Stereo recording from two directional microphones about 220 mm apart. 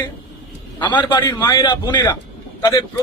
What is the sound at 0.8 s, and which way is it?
A man's voice, 20° left (ahead or behind).